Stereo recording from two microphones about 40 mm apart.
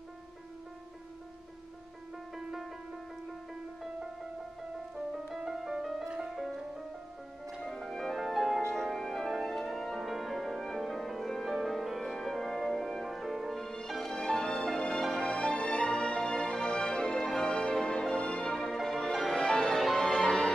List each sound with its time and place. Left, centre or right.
2.3 s music: centre
4.9 s music: centre
7.6 s music: centre
14.1 s music: centre
15.3 s music: left; by 19.5 s centre
19.5 s music: centre